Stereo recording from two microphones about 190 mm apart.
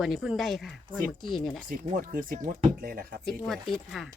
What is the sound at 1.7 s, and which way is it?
Speech, 45° right (ahead or behind).